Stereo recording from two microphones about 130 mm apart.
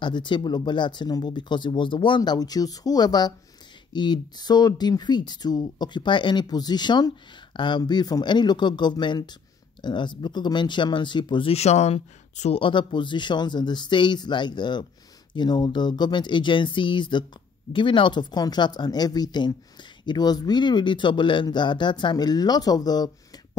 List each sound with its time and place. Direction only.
0.0 s speech: 35° left (ahead or behind)
11.5 s speech: 60° left (ahead or behind); by 23.1 s 30° left (ahead or behind)